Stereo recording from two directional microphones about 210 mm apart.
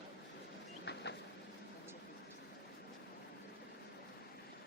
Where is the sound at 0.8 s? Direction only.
55° left (ahead or behind).